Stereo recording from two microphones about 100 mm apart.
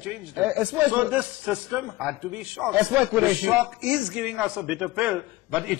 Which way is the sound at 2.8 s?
10° right (ahead or behind).